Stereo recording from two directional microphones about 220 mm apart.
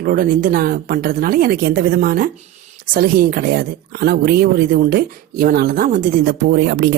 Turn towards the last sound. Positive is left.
turn(degrees=-45)  # may be behind; listen again after turning